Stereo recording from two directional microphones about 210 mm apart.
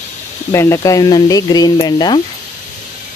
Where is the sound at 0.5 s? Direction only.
15° left (ahead or behind).